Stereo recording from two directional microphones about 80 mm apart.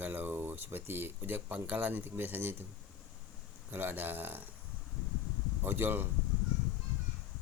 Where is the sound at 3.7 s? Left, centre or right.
Right.